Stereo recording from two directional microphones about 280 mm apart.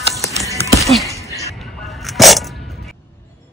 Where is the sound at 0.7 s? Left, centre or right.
Centre.